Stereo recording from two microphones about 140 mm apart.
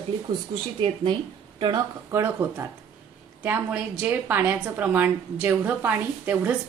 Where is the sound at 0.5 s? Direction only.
30° right (ahead or behind).